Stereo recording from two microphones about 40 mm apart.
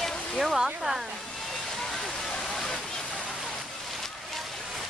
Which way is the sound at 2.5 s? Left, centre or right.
Centre.